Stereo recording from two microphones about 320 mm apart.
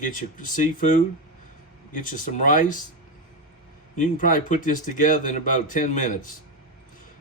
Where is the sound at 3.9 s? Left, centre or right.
Left.